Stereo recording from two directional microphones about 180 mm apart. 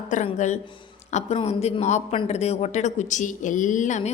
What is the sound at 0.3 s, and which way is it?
Speech, 40° left (ahead or behind).